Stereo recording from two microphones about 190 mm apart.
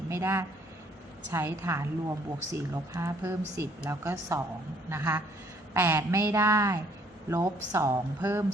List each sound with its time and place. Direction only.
0.1 s a woman's voice: 15° right (ahead or behind)